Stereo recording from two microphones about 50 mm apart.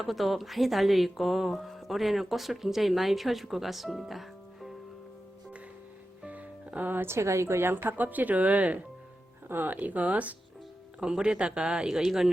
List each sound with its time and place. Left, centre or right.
0.0 s speech: centre
6.2 s music: right
6.9 s a woman's voice: right
7.9 s speech: right
11.0 s speech: centre